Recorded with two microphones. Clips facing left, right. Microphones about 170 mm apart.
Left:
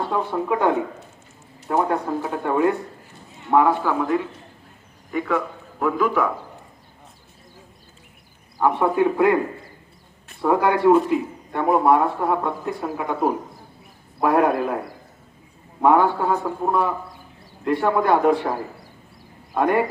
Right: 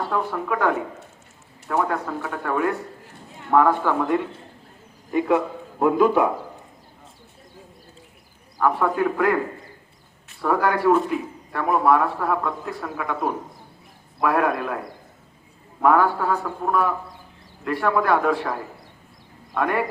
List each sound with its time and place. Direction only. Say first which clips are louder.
0.1 s a man's voice: left 2 dB; 20° left (ahead or behind)
5.1 s a man's voice: right 3 dB; 20° right (ahead or behind)
8.6 s speech: left 2 dB; 20° left (ahead or behind)
10.4 s speech: left 3 dB; 20° left (ahead or behind)
15.8 s speech: left 1 dB; 25° left (ahead or behind)